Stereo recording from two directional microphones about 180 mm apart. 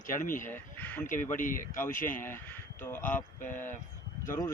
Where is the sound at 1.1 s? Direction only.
50° left (ahead or behind).